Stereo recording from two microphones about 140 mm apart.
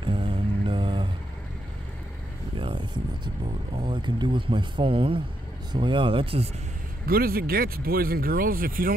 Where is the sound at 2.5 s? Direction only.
35° right (ahead or behind).